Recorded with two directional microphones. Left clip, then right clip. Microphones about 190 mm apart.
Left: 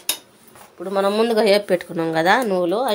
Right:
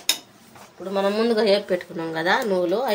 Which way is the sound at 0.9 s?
45° left (ahead or behind).